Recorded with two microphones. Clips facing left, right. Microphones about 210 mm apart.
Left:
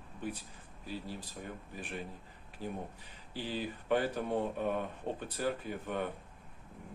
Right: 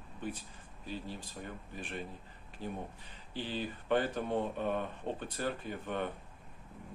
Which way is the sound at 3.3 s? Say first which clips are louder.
Even; 10° left (ahead or behind).